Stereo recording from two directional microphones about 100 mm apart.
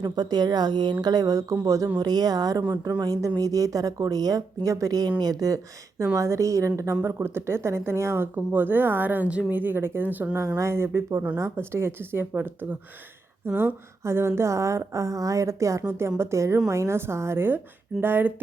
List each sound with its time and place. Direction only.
0.0 s a woman's voice: 45° right (ahead or behind); by 18.3 s 20° right (ahead or behind)